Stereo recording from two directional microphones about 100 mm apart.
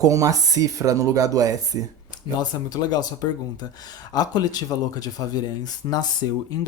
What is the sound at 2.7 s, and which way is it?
Speech, 40° left (ahead or behind).